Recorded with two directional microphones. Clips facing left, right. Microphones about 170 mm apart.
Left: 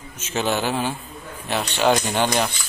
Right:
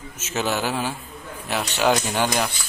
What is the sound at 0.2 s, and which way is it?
Speech, 5° right (ahead or behind).